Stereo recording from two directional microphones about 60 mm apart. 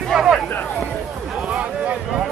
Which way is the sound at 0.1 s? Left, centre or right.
Centre.